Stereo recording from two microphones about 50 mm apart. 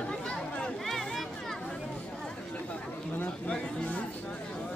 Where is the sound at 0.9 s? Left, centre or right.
Centre.